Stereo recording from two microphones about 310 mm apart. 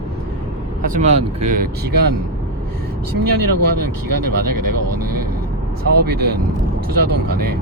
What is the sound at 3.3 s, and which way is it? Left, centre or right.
Speech, right.